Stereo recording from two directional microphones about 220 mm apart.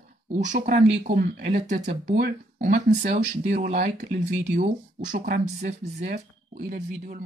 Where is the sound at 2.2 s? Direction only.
35° right (ahead or behind).